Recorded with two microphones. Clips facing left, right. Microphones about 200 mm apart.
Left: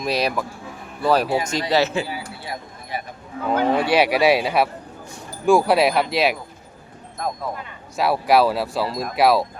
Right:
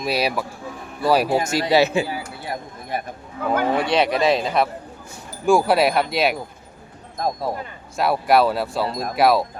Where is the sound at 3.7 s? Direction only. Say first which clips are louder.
Left 1 dB; 5° left (ahead or behind).